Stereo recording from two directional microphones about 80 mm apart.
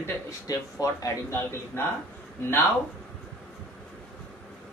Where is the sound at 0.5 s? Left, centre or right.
Left.